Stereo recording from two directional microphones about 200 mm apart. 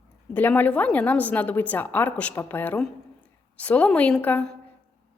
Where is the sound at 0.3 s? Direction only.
10° left (ahead or behind).